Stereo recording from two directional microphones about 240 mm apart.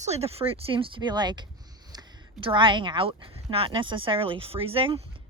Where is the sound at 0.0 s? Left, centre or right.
Right.